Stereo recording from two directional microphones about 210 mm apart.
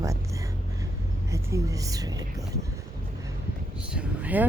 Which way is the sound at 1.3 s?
15° right (ahead or behind).